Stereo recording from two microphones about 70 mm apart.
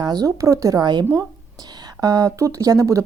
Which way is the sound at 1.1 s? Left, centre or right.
Right.